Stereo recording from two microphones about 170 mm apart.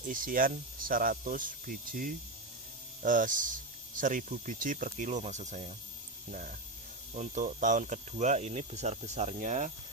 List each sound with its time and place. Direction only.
0.1 s speech: 55° right (ahead or behind)
7.1 s speech: 45° right (ahead or behind)